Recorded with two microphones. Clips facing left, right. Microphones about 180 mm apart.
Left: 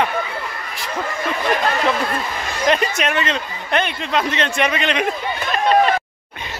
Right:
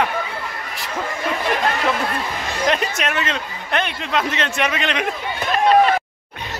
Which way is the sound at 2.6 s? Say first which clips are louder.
Left 3 dB; centre (ahead or behind).